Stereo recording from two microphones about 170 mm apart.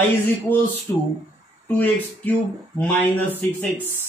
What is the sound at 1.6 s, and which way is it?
A man's voice, 10° left (ahead or behind).